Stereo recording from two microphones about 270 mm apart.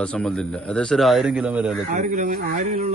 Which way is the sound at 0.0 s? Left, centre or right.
Centre.